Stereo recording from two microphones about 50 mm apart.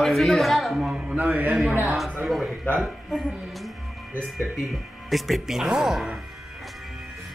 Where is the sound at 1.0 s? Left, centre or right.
Right.